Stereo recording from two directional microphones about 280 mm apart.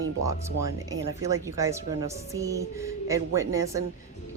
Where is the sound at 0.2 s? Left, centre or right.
Centre.